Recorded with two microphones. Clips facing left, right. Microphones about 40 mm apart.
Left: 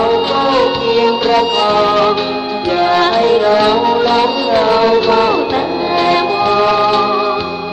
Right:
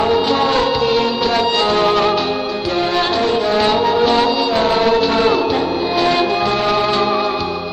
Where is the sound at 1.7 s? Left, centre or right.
Centre.